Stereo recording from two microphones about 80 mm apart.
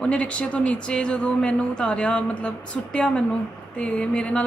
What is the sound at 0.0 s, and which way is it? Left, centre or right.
Speech, centre.